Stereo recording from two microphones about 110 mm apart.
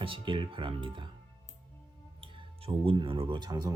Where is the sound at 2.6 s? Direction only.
55° right (ahead or behind); by 3.7 s 40° right (ahead or behind).